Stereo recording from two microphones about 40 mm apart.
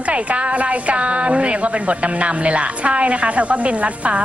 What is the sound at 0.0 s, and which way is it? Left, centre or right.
A woman's voice, right.